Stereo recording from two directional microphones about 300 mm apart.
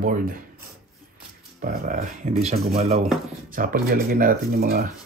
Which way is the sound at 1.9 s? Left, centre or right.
Right.